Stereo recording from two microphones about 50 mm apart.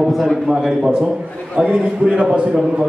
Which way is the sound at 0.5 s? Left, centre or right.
Centre.